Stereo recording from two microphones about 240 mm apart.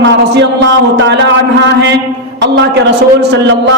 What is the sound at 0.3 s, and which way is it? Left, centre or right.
Speech, right.